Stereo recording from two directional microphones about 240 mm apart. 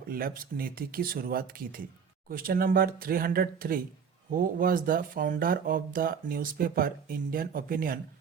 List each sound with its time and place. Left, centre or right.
0.1 s speech: right